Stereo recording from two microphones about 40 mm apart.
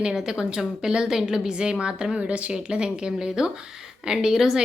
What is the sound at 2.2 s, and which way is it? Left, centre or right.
A woman's voice, right.